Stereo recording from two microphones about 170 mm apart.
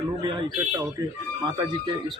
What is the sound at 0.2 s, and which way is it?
A man's voice, 25° right (ahead or behind).